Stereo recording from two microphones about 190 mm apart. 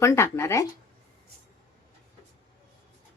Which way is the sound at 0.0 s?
15° left (ahead or behind).